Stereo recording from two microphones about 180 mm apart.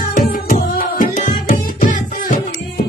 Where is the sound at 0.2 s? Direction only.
50° left (ahead or behind).